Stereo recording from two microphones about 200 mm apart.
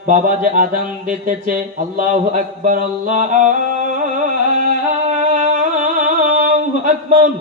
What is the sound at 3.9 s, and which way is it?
Music, 40° right (ahead or behind).